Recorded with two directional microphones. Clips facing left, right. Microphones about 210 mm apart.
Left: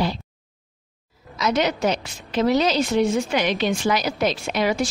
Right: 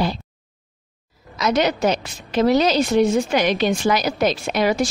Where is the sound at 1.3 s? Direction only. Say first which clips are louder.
Right 2 dB; 40° right (ahead or behind).